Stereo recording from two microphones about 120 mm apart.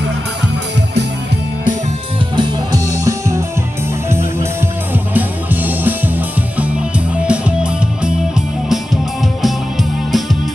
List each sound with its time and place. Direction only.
2.3 s music: 35° right (ahead or behind); by 10.3 s centre (ahead or behind)